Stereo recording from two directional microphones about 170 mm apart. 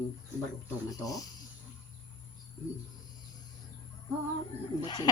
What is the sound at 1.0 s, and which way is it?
Speech, 20° left (ahead or behind).